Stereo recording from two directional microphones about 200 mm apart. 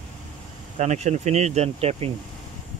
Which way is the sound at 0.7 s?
35° right (ahead or behind).